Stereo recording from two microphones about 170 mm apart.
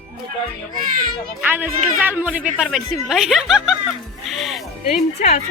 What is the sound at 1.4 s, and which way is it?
A woman's voice, 10° right (ahead or behind).